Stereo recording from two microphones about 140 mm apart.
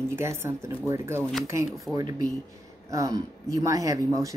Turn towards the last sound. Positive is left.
turn(degrees=-25)  # may be behind; listen again after turning